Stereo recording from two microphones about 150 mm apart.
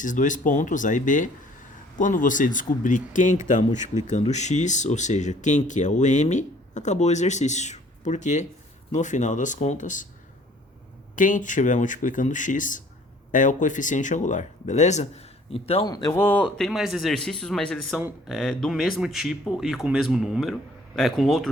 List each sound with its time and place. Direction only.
0.0 s speech: 60° left (ahead or behind)
11.1 s speech: 60° left (ahead or behind); by 15.9 s 40° left (ahead or behind)
15.9 s speech: 25° left (ahead or behind)
16.2 s speech: 10° left (ahead or behind)